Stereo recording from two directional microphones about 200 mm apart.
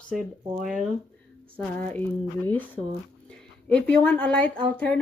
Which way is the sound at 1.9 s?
10° left (ahead or behind).